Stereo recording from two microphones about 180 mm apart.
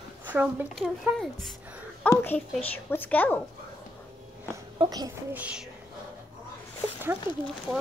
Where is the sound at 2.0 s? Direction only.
10° left (ahead or behind).